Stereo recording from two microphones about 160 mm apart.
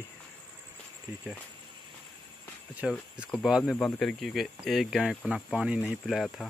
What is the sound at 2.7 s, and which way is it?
Speech, 5° right (ahead or behind).